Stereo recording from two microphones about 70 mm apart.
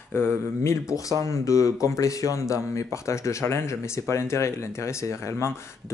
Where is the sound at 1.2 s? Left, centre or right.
Left.